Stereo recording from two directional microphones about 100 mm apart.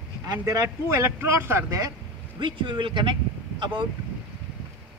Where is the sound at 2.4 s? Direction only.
55° right (ahead or behind).